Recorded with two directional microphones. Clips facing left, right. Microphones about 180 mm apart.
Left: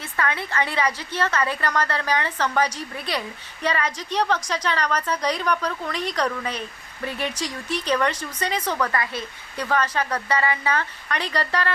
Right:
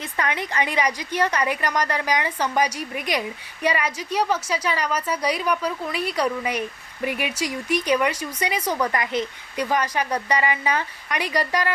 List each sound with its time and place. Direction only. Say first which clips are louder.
0.0 s a woman's voice: even; 15° right (ahead or behind)